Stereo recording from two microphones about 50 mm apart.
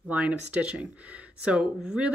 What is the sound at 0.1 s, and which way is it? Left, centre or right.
Speech, right.